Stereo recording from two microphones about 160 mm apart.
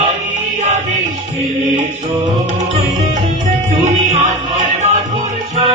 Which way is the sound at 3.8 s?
45° right (ahead or behind).